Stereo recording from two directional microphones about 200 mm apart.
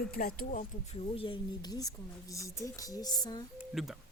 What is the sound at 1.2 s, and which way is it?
Speech, 25° left (ahead or behind).